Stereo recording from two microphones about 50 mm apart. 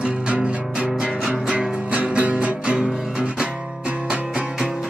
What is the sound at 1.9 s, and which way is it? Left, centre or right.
Music, right.